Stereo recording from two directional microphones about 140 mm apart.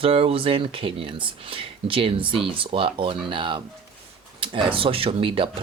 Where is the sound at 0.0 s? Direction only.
45° right (ahead or behind).